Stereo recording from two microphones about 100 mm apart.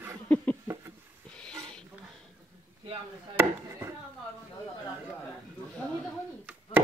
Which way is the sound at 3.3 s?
25° right (ahead or behind).